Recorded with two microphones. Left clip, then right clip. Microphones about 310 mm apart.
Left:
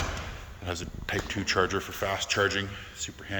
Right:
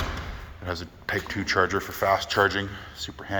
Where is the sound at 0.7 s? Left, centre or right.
Centre.